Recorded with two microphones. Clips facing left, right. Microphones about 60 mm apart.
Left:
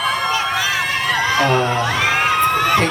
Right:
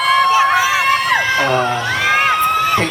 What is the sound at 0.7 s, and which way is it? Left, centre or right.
Crowd, right.